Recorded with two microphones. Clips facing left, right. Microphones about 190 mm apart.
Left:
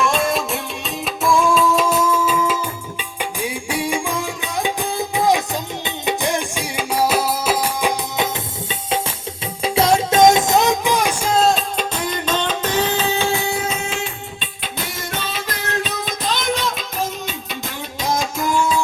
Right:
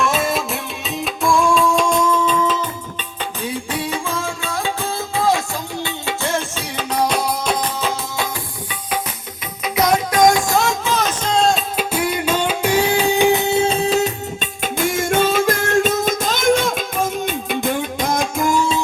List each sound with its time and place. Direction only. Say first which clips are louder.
0.0 s music: even; centre (ahead or behind)
9.6 s music: left 1 dB; 30° left (ahead or behind); by 14.1 s 35° right (ahead or behind)
14.6 s music: right 10 dB; 50° right (ahead or behind)